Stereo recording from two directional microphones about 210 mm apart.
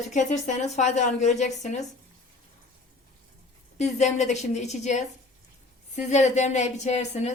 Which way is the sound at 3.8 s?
35° left (ahead or behind).